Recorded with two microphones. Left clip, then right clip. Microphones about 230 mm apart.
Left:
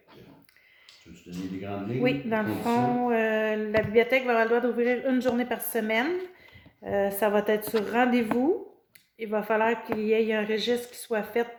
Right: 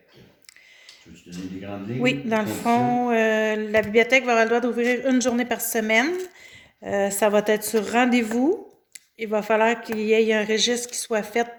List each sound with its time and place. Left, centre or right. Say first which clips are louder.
1.3 s speech: right 1 dB; centre
2.0 s speech: right 4 dB; right